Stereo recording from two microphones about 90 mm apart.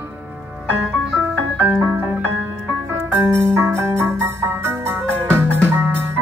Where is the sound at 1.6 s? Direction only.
20° right (ahead or behind).